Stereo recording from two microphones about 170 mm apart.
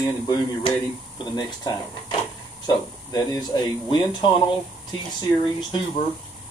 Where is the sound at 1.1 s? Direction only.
25° left (ahead or behind).